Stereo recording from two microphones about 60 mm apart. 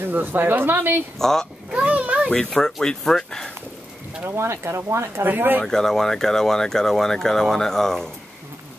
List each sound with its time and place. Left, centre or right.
0.0 s speech: right
1.2 s speech: centre
1.7 s a sound: right
2.5 s speech: centre
4.2 s speech: right
5.2 s speech: right
5.6 s speech: centre